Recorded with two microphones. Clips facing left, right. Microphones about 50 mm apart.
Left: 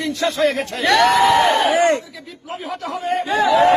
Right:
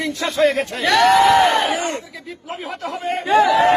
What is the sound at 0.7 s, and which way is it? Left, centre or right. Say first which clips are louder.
Speech: left 1 dB; centre.